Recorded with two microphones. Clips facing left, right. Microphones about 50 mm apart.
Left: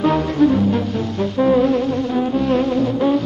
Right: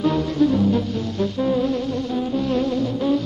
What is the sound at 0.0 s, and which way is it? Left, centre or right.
Music, left.